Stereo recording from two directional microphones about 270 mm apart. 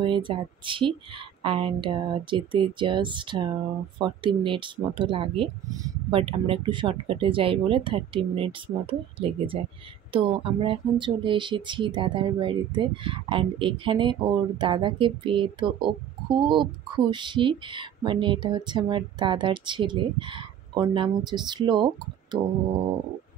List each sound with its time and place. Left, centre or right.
0.0 s speech: centre